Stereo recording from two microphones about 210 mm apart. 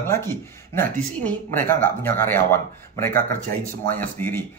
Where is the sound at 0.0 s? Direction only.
10° left (ahead or behind).